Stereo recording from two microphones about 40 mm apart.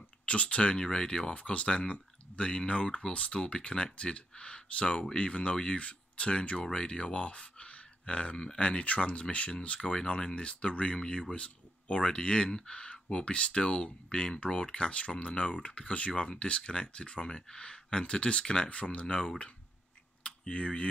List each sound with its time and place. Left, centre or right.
0.2 s speech: left
0.7 s speech: centre
6.6 s speech: centre
9.8 s speech: centre